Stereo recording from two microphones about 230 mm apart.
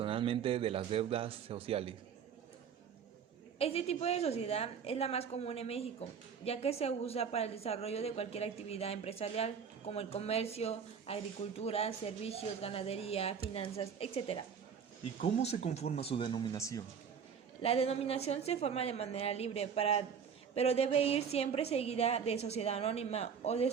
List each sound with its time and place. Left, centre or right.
0.0 s a man's voice: right
3.6 s a woman's voice: left
17.6 s a woman's voice: left